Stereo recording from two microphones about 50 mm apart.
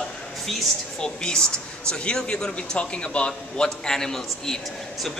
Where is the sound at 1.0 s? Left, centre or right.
Centre.